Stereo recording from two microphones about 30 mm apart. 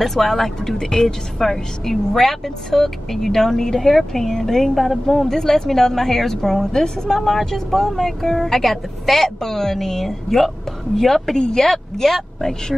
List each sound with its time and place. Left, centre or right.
0.0 s a woman's voice: centre
1.0 s a woman's voice: centre
7.2 s a woman's voice: centre
11.3 s speech: left
11.6 s a woman's voice: centre